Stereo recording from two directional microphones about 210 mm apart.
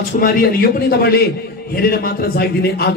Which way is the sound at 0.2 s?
45° left (ahead or behind).